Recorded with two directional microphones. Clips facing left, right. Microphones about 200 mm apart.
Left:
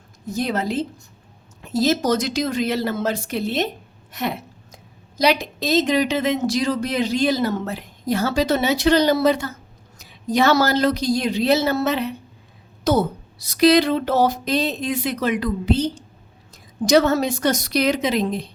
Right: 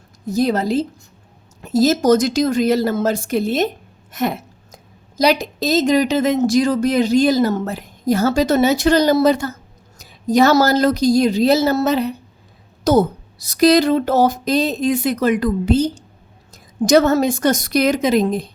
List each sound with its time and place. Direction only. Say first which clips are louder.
0.3 s a woman's voice: right 6 dB; 40° right (ahead or behind)